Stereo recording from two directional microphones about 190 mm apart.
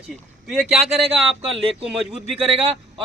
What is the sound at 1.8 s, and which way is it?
Speech, 5° right (ahead or behind).